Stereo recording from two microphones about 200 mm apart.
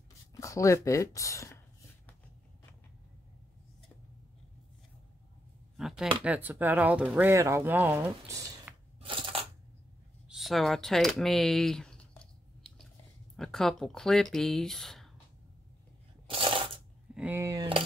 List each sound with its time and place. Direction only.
0.3 s speech: 15° left (ahead or behind)
5.8 s a sound: centre (ahead or behind)
6.2 s speech: 10° right (ahead or behind)
8.7 s crushing: 5° right (ahead or behind)
9.0 s crushing: 25° right (ahead or behind)
10.2 s typing: centre (ahead or behind)
13.4 s speech: centre (ahead or behind)
16.3 s coin: 25° right (ahead or behind)
17.1 s speech: 5° right (ahead or behind)